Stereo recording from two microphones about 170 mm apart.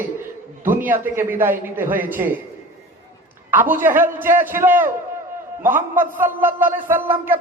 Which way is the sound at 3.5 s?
10° right (ahead or behind).